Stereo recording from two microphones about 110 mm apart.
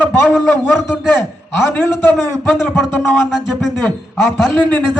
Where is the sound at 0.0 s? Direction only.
15° left (ahead or behind).